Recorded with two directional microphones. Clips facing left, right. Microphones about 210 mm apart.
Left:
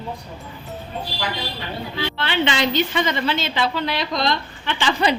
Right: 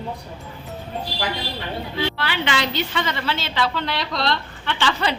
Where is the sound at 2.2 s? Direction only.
25° left (ahead or behind).